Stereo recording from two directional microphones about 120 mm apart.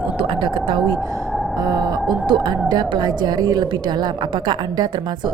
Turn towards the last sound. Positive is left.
turn(degrees=-35)  # may be behind; listen again after turning